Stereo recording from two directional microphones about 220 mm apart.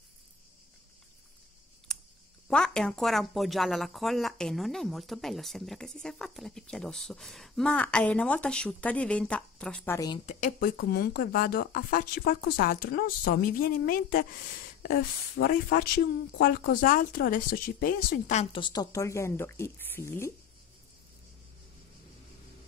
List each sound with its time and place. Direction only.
1.9 s a sound: centre (ahead or behind)
2.4 s speech: 5° left (ahead or behind)
9.9 s a woman's voice: 20° left (ahead or behind)
10.2 s speech: 35° left (ahead or behind)
10.8 s speech: 45° left (ahead or behind); by 20.3 s 10° left (ahead or behind)